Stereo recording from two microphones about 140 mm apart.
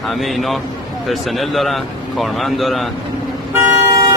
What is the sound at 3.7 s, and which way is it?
Vehicle, 20° right (ahead or behind).